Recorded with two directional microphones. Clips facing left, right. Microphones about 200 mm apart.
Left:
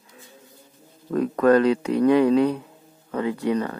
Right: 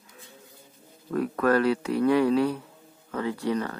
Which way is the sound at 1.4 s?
20° left (ahead or behind).